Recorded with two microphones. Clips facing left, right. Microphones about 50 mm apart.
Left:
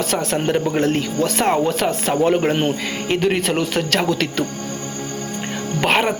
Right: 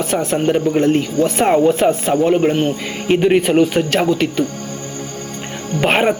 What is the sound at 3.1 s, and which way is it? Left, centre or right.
Speech, centre.